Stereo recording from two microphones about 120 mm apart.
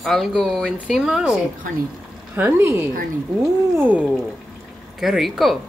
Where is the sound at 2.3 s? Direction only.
20° right (ahead or behind).